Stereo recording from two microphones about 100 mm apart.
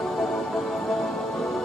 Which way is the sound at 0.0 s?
5° left (ahead or behind).